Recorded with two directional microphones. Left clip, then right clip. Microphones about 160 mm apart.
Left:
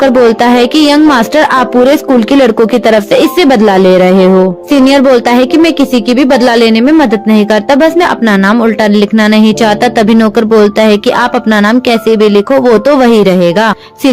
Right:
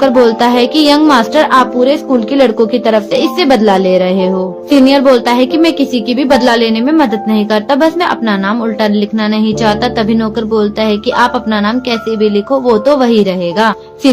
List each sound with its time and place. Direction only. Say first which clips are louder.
0.0 s a woman's voice: left 2 dB; 50° left (ahead or behind)